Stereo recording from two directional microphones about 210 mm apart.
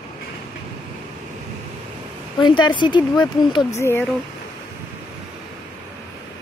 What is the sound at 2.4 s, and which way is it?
Speech, 20° left (ahead or behind).